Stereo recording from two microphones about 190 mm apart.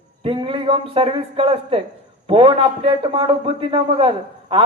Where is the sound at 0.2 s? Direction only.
30° right (ahead or behind).